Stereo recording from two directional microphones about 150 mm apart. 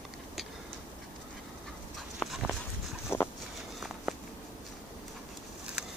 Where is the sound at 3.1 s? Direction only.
15° left (ahead or behind).